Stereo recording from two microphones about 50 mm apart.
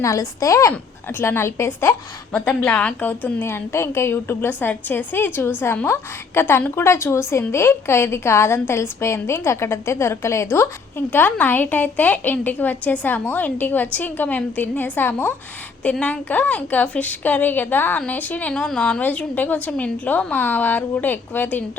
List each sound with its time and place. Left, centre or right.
0.0 s a woman's voice: left
1.2 s speech: left
2.5 s speech: left
3.0 s a woman's voice: left
3.4 s speech: left
4.4 s a woman's voice: left
5.8 s speech: left
6.4 s a woman's voice: left
6.8 s a woman's voice: left
15.8 s a woman's voice: left
18.5 s speech: centre
19.0 s a woman's voice: left